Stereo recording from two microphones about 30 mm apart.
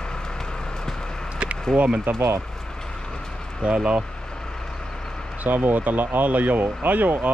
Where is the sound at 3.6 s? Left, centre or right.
Right.